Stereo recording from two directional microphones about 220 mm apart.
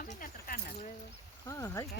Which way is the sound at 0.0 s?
35° left (ahead or behind).